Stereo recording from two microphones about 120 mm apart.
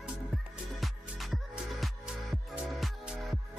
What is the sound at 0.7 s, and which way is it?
Music, centre (ahead or behind).